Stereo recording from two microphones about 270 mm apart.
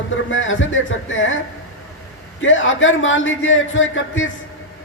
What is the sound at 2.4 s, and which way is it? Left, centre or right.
A man's voice, left.